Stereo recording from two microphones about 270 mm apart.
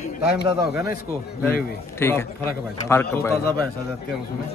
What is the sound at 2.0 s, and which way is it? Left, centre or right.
Speech, centre.